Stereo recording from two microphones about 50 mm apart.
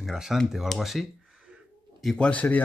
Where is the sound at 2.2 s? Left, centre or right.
Left.